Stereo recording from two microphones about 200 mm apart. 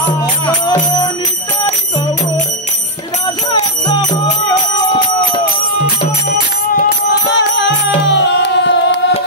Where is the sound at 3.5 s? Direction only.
25° left (ahead or behind).